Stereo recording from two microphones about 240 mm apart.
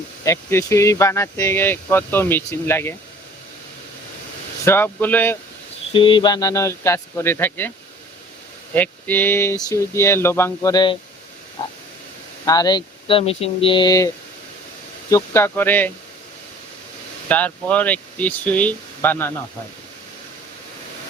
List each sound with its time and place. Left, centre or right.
0.3 s speech: centre
4.6 s speech: centre
5.9 s speech: left
8.7 s speech: centre
11.6 s frog: centre
12.5 s speech: centre
15.1 s speech: centre
17.2 s speech: centre